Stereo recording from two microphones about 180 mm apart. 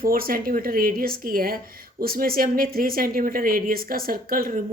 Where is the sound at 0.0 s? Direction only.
55° right (ahead or behind).